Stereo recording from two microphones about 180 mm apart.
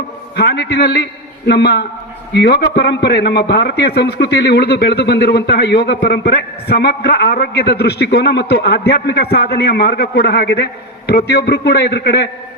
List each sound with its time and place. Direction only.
0.3 s a man's voice: 65° left (ahead or behind)